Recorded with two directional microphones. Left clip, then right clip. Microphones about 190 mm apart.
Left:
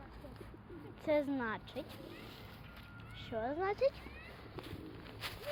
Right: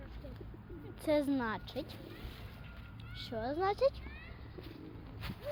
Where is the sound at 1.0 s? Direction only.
25° right (ahead or behind).